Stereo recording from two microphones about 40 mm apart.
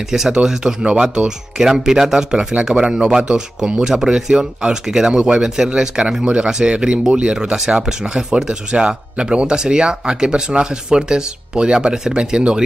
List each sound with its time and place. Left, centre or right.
0.1 s speech: centre